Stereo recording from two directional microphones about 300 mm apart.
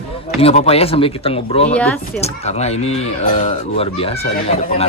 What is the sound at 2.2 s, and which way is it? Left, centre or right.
Speech, left.